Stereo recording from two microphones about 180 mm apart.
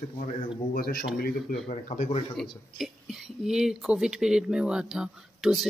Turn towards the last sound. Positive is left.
turn(degrees=-5)  # may be behind; listen again after turning